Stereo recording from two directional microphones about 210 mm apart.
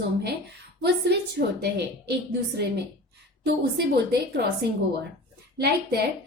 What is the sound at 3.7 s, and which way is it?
Speech, 50° right (ahead or behind).